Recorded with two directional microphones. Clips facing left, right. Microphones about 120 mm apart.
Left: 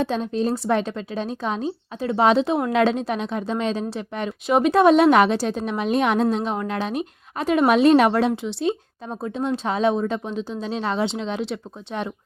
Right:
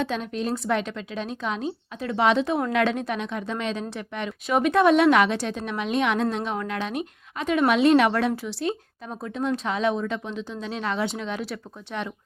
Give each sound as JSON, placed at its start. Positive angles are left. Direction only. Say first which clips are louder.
{"t": 0.0, "sound": "speech", "louder": "left 5 dB", "side_deg": 30}